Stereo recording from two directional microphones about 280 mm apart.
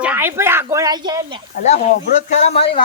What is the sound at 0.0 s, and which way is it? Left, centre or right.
Speech, centre.